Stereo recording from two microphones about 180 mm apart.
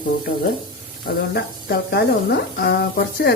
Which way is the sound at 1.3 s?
65° left (ahead or behind).